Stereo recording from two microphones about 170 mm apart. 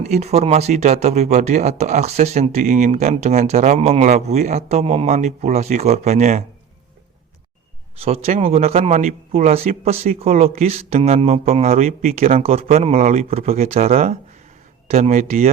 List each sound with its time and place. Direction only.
0.0 s speech: 40° right (ahead or behind)
8.0 s speech: 35° right (ahead or behind)